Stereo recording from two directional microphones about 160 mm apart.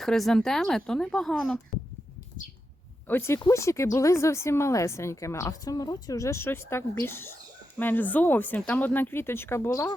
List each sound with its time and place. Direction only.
0.0 s speech: centre (ahead or behind)
3.1 s a woman's voice: 15° left (ahead or behind)